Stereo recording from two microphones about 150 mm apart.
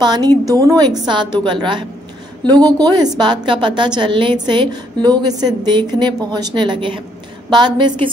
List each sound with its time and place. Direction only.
0.0 s a woman's voice: 30° right (ahead or behind)